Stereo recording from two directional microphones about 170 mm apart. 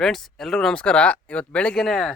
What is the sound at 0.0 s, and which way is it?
Speech, centre (ahead or behind).